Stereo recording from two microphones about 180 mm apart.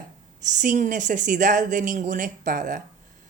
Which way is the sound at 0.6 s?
45° right (ahead or behind).